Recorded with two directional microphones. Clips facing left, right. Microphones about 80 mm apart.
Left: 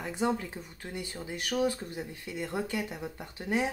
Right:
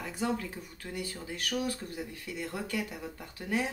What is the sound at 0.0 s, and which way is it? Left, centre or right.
Speech, left.